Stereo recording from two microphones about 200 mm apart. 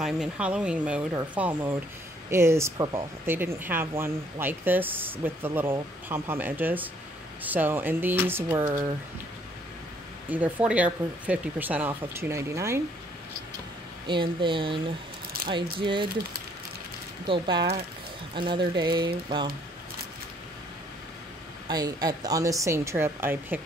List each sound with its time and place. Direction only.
0.0 s speech: 5° right (ahead or behind)
10.3 s speech: 10° right (ahead or behind)
14.0 s speech: 25° right (ahead or behind)
17.3 s speech: 20° right (ahead or behind)
21.6 s speech: 20° right (ahead or behind)